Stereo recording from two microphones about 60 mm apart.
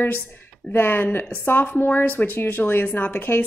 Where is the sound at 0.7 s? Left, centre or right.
Left.